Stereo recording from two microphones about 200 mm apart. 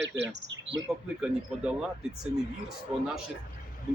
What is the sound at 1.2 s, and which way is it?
Speech, 5° right (ahead or behind).